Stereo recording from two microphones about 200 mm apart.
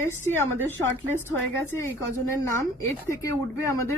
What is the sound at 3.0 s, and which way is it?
Speech, 15° left (ahead or behind).